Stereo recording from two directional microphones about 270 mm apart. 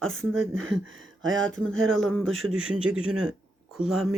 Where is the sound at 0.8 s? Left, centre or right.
Right.